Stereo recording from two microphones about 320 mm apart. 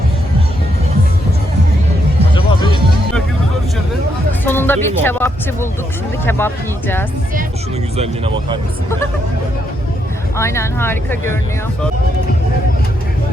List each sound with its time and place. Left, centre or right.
4.4 s speech: centre
7.9 s speech: centre
10.3 s speech: centre